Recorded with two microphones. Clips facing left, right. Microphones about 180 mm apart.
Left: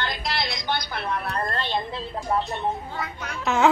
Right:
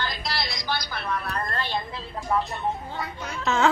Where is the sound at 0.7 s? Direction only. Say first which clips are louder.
Left 1 dB; 25° left (ahead or behind).